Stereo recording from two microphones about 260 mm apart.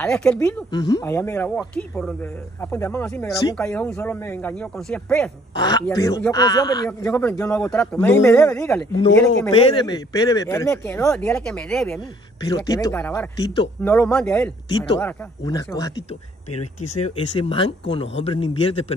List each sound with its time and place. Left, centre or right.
0.0 s speech: centre
0.7 s speech: centre
5.5 s speech: centre
9.5 s speech: centre
12.4 s speech: centre
17.4 s speech: left